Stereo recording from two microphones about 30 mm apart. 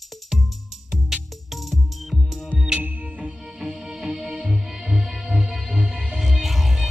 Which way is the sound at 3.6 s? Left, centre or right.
Centre.